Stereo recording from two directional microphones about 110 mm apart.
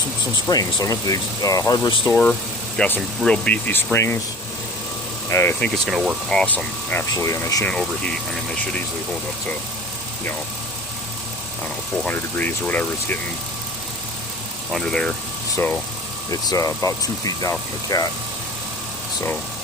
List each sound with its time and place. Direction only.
0.4 s speech: 35° left (ahead or behind)
2.0 s speech: 15° left (ahead or behind)
5.3 s speech: 25° left (ahead or behind)
5.5 s speech: 5° left (ahead or behind)
6.3 s speech: 5° left (ahead or behind)
7.1 s speech: 30° left (ahead or behind)
7.6 s speech: 5° left (ahead or behind)
12.0 s speech: 15° left (ahead or behind)
14.7 s speech: 5° left (ahead or behind)
16.3 s speech: 30° left (ahead or behind)